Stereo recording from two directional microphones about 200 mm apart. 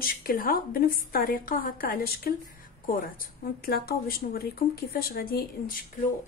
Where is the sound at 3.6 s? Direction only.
50° left (ahead or behind).